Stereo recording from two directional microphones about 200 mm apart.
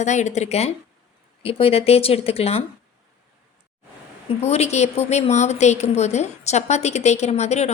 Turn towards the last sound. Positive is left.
turn(degrees=35)  # may be behind; listen again after turning